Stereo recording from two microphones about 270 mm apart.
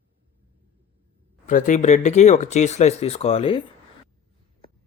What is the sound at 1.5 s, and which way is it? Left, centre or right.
Speech, left.